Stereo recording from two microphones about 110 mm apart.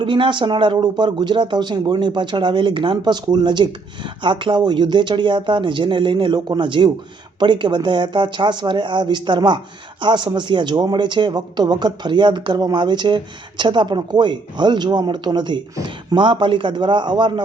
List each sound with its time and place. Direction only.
0.0 s speech: 50° right (ahead or behind)